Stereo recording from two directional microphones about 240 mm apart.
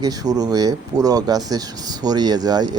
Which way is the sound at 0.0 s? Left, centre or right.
Centre.